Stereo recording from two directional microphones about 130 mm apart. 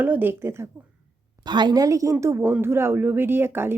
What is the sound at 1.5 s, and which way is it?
Speech, 35° right (ahead or behind).